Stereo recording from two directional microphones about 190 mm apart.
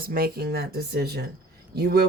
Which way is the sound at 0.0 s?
50° right (ahead or behind).